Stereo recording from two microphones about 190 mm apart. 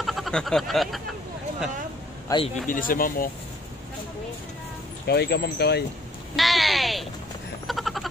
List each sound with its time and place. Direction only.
0.0 s speech: centre (ahead or behind)
2.2 s a man's voice: 25° left (ahead or behind)
2.6 s speech: 45° left (ahead or behind)
5.0 s speech: 60° left (ahead or behind)
6.3 s speech: centre (ahead or behind)
7.6 s a sound: centre (ahead or behind)